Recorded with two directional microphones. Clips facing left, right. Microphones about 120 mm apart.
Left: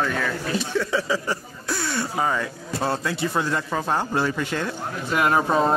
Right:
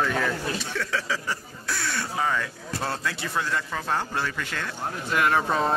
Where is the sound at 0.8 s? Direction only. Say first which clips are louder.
Left 4 dB; 15° left (ahead or behind).